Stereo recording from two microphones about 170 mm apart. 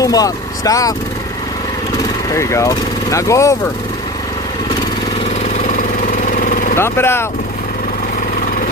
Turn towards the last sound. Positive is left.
turn(degrees=15)  # may be behind; listen again after turning